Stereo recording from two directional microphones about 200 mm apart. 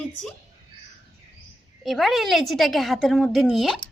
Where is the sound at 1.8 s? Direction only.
Centre (ahead or behind).